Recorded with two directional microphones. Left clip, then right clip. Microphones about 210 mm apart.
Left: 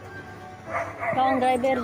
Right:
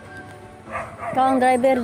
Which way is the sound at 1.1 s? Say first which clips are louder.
Right 5 dB; 35° right (ahead or behind).